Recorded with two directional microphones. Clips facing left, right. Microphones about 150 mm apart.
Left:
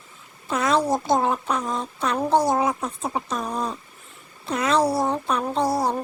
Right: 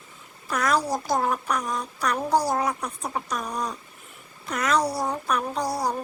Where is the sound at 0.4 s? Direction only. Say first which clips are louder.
Left 3 dB; 25° left (ahead or behind).